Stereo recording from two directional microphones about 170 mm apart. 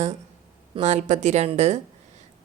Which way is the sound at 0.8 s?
40° right (ahead or behind).